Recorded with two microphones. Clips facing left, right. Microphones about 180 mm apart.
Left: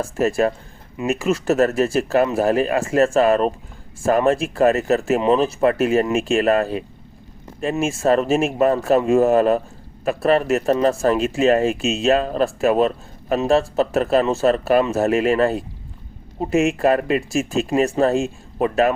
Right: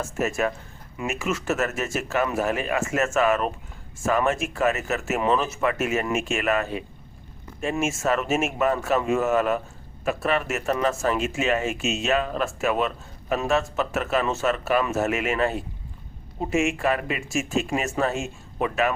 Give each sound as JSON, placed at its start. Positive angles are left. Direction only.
{"t": 0.0, "sound": "speech", "side_deg": 35}